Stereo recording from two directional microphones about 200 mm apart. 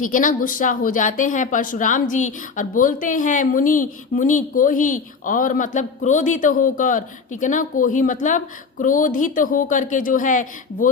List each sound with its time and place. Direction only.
0.0 s a woman's voice: 40° left (ahead or behind)